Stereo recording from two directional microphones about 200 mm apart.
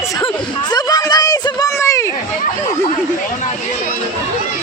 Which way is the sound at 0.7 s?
20° left (ahead or behind).